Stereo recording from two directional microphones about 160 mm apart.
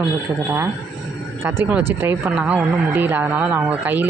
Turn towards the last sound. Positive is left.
turn(degrees=-10)  # may be behind; listen again after turning